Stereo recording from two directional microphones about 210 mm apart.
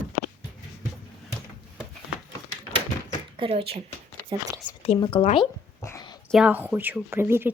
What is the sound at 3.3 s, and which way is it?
Speech, 25° right (ahead or behind).